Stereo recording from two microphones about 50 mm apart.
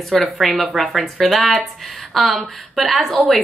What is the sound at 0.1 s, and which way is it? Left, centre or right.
Speech, centre.